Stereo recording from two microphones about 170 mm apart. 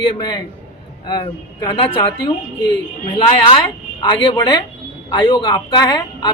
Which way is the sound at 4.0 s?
30° left (ahead or behind).